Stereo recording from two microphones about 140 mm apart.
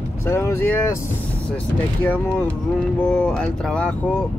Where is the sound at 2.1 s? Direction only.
10° left (ahead or behind).